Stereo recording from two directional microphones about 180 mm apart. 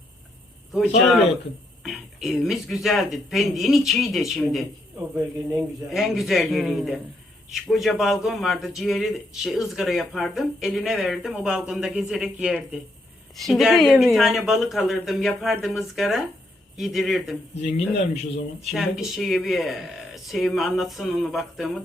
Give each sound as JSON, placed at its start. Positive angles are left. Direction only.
{"t": 1.8, "sound": "a man's voice", "side_deg": 0}
{"t": 4.9, "sound": "speech", "side_deg": -15}
{"t": 5.9, "sound": "a man's voice", "side_deg": 0}
{"t": 17.6, "sound": "a man's voice", "side_deg": 40}
{"t": 18.6, "sound": "a man's voice", "side_deg": 0}